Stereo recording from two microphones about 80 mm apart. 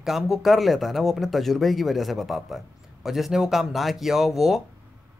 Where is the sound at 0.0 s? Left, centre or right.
Centre.